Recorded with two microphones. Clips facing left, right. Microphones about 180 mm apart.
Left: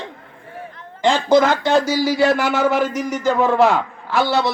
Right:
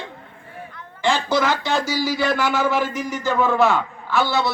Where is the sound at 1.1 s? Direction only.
50° left (ahead or behind).